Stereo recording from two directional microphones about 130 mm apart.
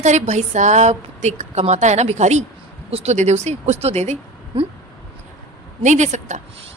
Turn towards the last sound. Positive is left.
turn(degrees=-65)  # may be behind; listen again after turning